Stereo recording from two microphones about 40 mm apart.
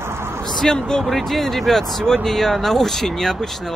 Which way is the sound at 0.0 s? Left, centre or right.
Right.